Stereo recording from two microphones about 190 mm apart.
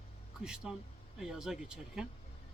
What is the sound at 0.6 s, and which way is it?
Speech, 5° right (ahead or behind).